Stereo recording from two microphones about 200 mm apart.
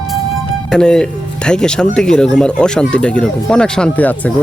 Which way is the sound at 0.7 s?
5° left (ahead or behind).